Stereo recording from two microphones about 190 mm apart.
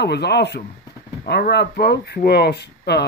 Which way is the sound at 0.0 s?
60° left (ahead or behind).